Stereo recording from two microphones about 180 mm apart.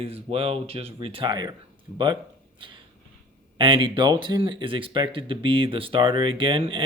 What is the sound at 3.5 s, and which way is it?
Speech, 30° right (ahead or behind).